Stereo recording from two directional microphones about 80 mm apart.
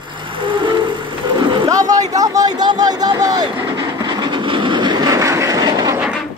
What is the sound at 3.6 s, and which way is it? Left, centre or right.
Train, right.